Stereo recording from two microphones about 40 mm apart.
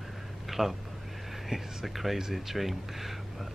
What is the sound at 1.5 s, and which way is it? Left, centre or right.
Speech, centre.